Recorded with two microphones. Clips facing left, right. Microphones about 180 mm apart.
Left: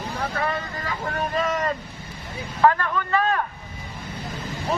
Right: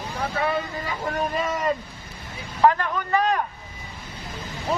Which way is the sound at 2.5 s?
15° right (ahead or behind).